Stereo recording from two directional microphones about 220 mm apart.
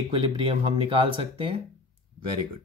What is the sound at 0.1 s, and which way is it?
Speech, 25° right (ahead or behind).